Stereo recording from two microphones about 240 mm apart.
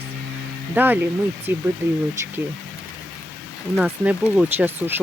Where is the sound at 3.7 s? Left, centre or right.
Centre.